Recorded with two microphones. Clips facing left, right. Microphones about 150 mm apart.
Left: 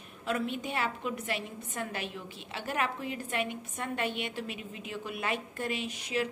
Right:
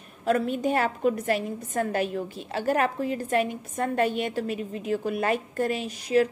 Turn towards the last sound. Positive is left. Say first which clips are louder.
# right 10 dB
turn(degrees=-40)  # may be behind; listen again after turning